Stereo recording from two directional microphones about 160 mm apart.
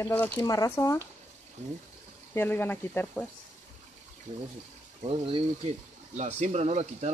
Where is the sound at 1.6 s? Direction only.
45° right (ahead or behind).